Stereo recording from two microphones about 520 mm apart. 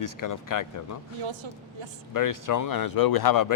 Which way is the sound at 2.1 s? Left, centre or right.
Left.